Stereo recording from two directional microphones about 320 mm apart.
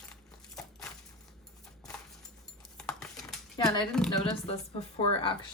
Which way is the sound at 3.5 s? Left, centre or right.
Centre.